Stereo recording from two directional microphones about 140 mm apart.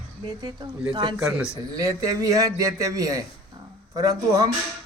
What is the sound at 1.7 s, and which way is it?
A man's voice, 25° right (ahead or behind).